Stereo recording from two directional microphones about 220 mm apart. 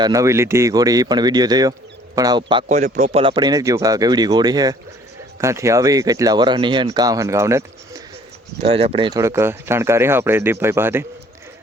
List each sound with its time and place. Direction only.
0.0 s a man's voice: 15° right (ahead or behind)
8.6 s speech: 25° right (ahead or behind); by 11.0 s 10° right (ahead or behind)